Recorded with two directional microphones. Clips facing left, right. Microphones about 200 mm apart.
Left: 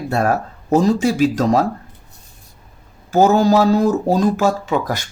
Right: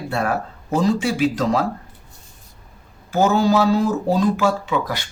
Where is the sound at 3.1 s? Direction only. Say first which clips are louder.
Left 4 dB; 40° left (ahead or behind).